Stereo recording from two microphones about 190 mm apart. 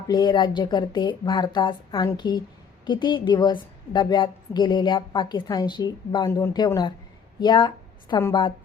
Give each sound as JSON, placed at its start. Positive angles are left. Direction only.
{"t": 0.1, "sound": "a woman's voice", "side_deg": 25}